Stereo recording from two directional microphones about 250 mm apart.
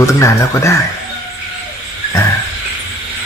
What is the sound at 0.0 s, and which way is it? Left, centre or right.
Speech, centre.